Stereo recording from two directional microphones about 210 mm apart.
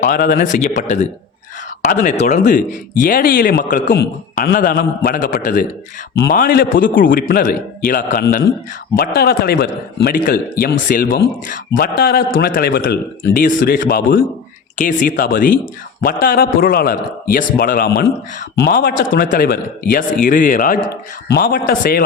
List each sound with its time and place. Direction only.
0.0 s speech: 40° left (ahead or behind)
1.8 s a man's voice: 40° left (ahead or behind)